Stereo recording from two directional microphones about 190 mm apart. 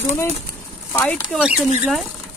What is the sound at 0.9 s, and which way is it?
Speech, 15° left (ahead or behind).